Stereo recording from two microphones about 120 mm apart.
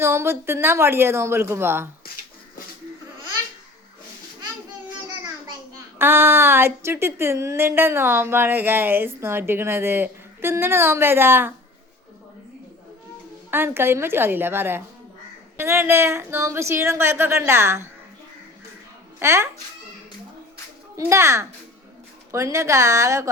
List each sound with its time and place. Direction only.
0.0 s a woman's voice: 20° right (ahead or behind)
6.0 s a woman's voice: 20° right (ahead or behind)
13.5 s a woman's voice: 20° right (ahead or behind)
19.2 s a woman's voice: 25° right (ahead or behind)
20.9 s a woman's voice: 25° right (ahead or behind)